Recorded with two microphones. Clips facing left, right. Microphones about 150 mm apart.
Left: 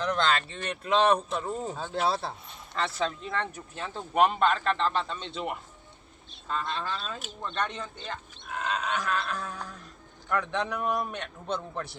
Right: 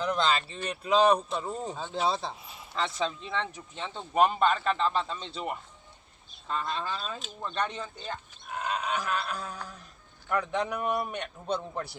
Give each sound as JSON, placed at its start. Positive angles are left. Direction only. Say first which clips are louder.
{"t": 0.0, "sound": "speech", "louder": "even", "side_deg": -5}